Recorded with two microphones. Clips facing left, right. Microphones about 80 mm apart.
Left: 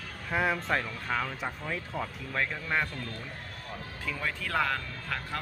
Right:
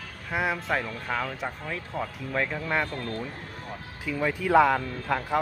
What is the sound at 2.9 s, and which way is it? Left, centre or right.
Speech, right.